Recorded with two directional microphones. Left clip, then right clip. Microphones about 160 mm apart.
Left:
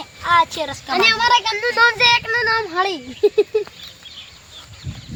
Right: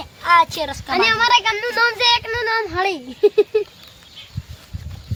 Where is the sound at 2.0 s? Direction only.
30° right (ahead or behind).